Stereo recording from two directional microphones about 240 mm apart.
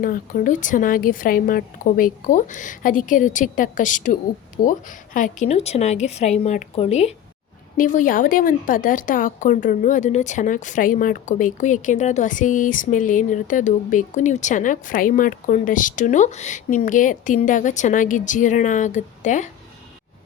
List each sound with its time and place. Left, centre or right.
0.0 s a woman's voice: left